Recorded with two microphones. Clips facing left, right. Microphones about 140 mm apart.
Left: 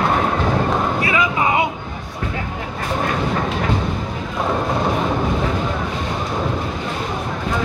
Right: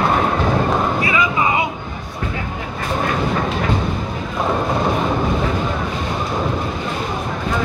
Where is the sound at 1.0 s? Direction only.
60° left (ahead or behind).